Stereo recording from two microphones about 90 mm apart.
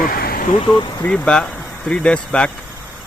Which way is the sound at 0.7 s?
60° left (ahead or behind).